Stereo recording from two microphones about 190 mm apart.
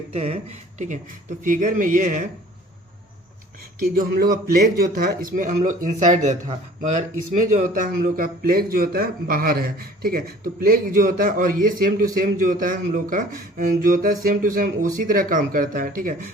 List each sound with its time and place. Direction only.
0.1 s speech: 35° right (ahead or behind)
3.9 s speech: 50° right (ahead or behind)